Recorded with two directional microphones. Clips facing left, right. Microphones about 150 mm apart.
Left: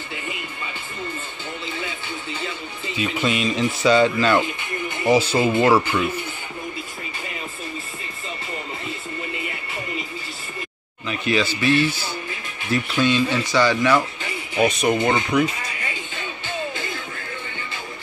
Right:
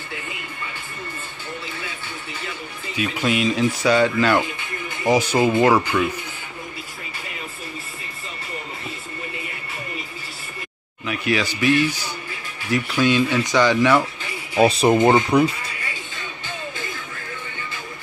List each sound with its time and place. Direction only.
3.0 s speech: 10° right (ahead or behind)
5.9 s speech: 5° left (ahead or behind)
11.1 s speech: 10° right (ahead or behind)
14.5 s speech: 30° right (ahead or behind)